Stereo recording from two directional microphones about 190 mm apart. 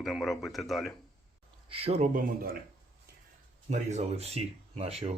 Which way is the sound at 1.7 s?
30° right (ahead or behind).